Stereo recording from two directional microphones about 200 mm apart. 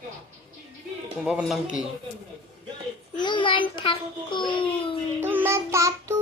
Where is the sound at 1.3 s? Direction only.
5° right (ahead or behind).